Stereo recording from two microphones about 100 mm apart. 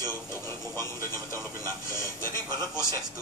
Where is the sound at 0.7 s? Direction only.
25° left (ahead or behind).